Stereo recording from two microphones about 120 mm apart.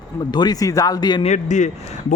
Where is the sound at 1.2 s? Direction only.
80° left.